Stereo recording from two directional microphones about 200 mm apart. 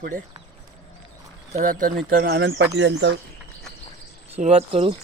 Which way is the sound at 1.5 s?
40° right (ahead or behind).